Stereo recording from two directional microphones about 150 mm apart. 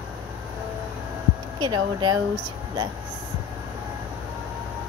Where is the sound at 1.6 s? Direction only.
30° right (ahead or behind).